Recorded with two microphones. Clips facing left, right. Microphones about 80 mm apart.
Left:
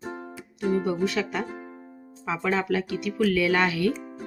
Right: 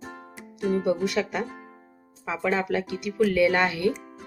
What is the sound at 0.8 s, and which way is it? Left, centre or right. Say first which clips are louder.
Speech: right 1 dB; centre.